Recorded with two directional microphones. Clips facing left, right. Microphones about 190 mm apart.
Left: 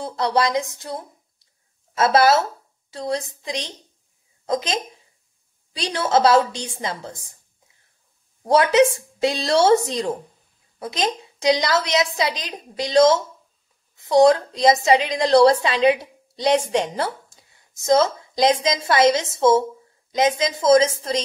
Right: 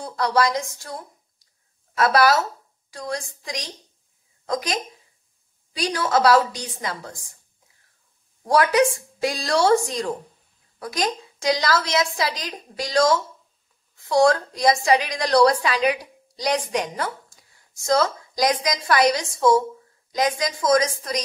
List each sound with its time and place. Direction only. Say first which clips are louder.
0.0 s a woman's voice: left 1 dB; 25° left (ahead or behind)
8.5 s a woman's voice: left 3 dB; 25° left (ahead or behind)